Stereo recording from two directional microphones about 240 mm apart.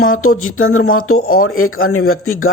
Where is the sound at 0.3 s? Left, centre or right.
Left.